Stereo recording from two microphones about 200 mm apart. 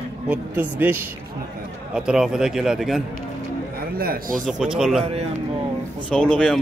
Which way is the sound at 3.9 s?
45° right (ahead or behind).